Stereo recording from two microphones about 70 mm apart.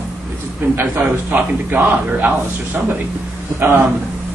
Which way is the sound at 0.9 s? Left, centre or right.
Right.